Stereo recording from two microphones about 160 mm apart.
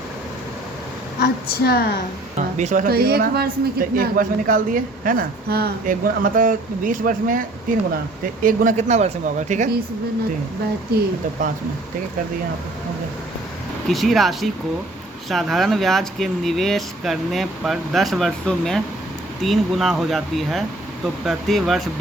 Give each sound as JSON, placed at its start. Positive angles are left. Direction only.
{"t": 1.2, "sound": "a woman's voice", "side_deg": 85}
{"t": 2.6, "sound": "a man's voice", "side_deg": -50}
{"t": 13.8, "sound": "speech", "side_deg": 0}